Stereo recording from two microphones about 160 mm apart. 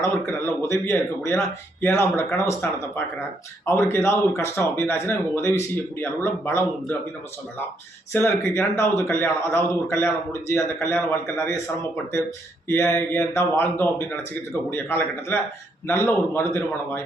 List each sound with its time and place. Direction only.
0.0 s speech: 15° left (ahead or behind)
3.7 s speech: 15° left (ahead or behind)
8.1 s speech: 15° left (ahead or behind)
12.6 s speech: 15° left (ahead or behind)